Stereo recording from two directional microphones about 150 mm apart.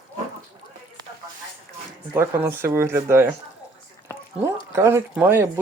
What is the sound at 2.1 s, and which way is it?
Speech, 15° right (ahead or behind).